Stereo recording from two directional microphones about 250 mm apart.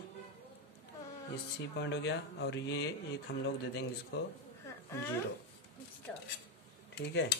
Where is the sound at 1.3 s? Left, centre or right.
Left.